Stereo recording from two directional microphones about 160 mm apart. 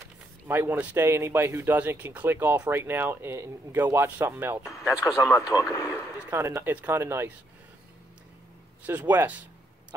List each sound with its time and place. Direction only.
0.5 s speech: 10° right (ahead or behind)
5.2 s speech: 20° left (ahead or behind)
6.1 s speech: 15° right (ahead or behind)
8.8 s speech: 10° right (ahead or behind)